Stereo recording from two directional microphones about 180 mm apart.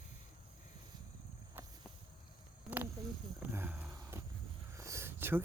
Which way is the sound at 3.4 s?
10° right (ahead or behind).